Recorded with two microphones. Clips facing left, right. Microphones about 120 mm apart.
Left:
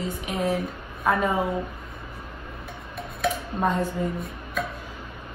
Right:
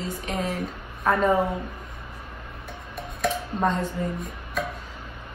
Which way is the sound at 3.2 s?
10° left (ahead or behind).